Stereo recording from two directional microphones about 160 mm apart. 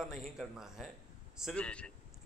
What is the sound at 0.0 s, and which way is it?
A man's voice, centre (ahead or behind).